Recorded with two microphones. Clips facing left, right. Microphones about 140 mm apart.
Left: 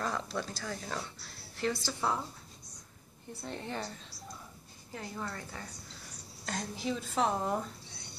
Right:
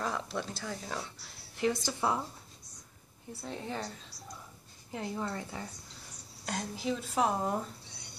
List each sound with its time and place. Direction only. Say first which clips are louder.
0.0 s a sound: even; 10° right (ahead or behind)
0.4 s a woman's voice: even; 20° right (ahead or behind)
0.8 s a woman's voice: even; 10° right (ahead or behind)
3.4 s a woman's voice: right 1 dB; 5° right (ahead or behind)
4.9 s a woman's voice: right 4 dB; 20° right (ahead or behind)
6.4 s a woman's voice: right 1 dB; 5° right (ahead or behind)